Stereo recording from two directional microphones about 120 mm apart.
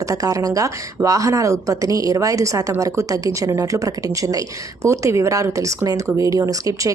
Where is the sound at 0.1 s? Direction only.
30° right (ahead or behind).